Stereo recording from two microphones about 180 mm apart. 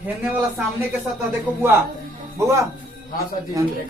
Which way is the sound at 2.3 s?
15° right (ahead or behind).